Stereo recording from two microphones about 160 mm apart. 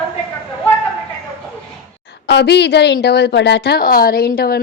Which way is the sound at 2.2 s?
90° left.